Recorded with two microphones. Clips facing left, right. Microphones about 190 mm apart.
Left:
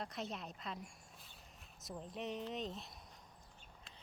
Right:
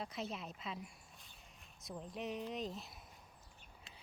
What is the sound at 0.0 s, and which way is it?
Speech, centre (ahead or behind).